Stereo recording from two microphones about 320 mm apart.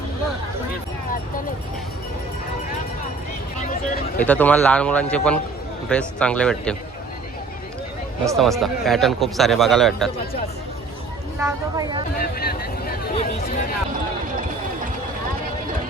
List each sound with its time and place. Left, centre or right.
4.2 s speech: centre
8.4 s speech: centre
11.3 s speech: centre
12.2 s speech: left